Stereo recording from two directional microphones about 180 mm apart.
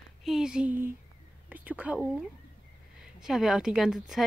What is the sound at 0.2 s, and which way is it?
Speech, centre (ahead or behind).